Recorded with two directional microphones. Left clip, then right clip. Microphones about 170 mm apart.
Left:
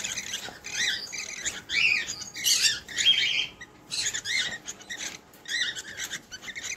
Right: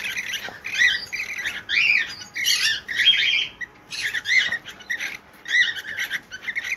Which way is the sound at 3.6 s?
25° left (ahead or behind).